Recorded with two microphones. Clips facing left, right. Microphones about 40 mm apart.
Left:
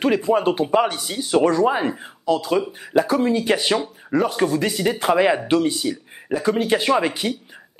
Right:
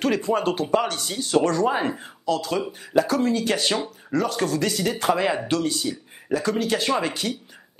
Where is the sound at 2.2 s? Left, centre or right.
Centre.